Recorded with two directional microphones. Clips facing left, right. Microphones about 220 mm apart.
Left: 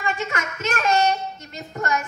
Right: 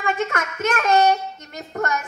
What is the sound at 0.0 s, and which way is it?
A child's voice, 55° right (ahead or behind).